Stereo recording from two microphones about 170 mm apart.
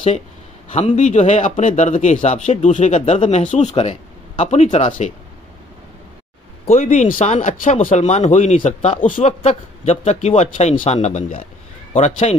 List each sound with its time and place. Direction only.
0.7 s speech: 45° left (ahead or behind)
6.7 s speech: 45° left (ahead or behind)